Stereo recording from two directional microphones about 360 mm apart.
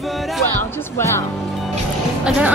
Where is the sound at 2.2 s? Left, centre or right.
Centre.